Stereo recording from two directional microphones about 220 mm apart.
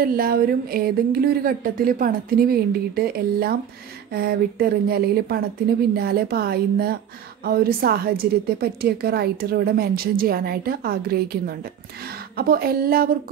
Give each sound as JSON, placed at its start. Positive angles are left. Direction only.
{"t": 0.0, "sound": "a woman's voice", "side_deg": -40}